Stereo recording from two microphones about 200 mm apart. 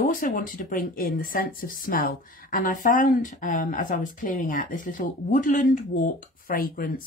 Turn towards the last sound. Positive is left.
turn(degrees=45)  # may be behind; listen again after turning